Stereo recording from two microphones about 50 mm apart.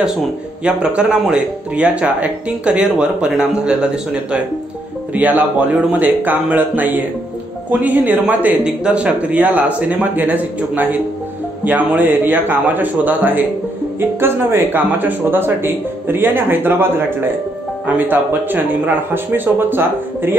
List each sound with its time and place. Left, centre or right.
0.7 s speech: right
5.1 s speech: right
8.6 s speech: right